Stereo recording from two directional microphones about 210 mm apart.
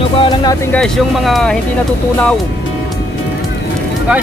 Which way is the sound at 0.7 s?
Centre (ahead or behind).